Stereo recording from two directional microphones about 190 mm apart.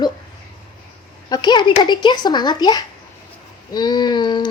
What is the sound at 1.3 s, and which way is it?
Speech, 20° left (ahead or behind).